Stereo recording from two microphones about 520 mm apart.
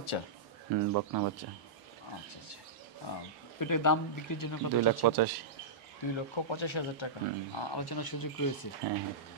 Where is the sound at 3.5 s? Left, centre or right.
Left.